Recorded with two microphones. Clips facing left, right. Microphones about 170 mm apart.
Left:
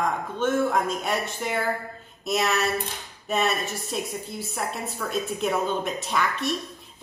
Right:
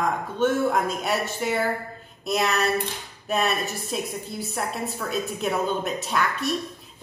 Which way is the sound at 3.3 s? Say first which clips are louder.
Even; centre (ahead or behind).